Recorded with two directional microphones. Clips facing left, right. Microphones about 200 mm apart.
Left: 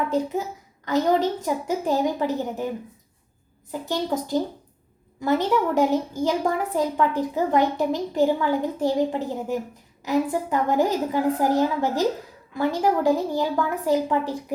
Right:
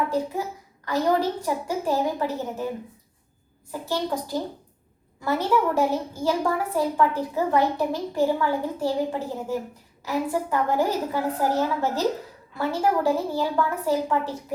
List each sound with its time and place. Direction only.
0.9 s a woman's voice: 20° left (ahead or behind)
3.7 s a woman's voice: 20° left (ahead or behind)